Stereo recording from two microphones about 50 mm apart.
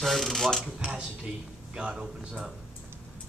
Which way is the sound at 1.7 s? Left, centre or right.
Centre.